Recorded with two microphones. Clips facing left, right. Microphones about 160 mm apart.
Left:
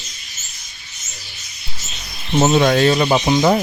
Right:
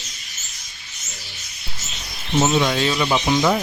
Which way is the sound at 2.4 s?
50° left (ahead or behind).